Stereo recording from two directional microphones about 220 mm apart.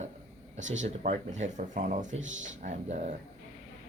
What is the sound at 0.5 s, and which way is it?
Speech, 60° right (ahead or behind).